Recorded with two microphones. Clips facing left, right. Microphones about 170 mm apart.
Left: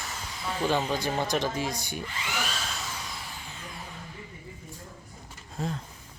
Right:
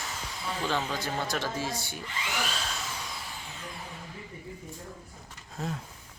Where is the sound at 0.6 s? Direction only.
15° left (ahead or behind).